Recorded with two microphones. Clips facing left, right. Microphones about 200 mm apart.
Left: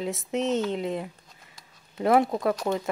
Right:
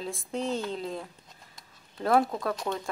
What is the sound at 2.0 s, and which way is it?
Speech, 20° left (ahead or behind).